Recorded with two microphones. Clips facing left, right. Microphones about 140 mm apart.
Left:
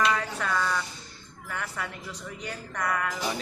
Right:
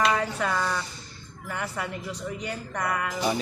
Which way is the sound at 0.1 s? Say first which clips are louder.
Right 2 dB; 20° right (ahead or behind).